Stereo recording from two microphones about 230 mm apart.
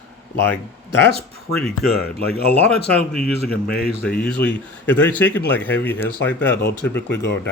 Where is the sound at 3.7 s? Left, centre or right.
Left.